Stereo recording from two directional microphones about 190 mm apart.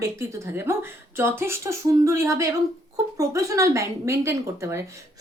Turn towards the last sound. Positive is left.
turn(degrees=-15)  # may be behind; listen again after turning